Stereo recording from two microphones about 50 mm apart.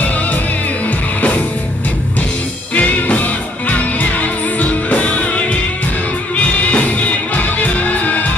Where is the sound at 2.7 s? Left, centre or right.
Left.